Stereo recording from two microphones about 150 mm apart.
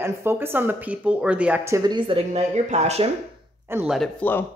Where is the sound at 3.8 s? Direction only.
Centre (ahead or behind).